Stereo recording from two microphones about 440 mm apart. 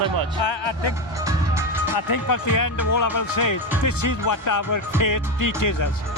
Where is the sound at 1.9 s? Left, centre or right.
Left.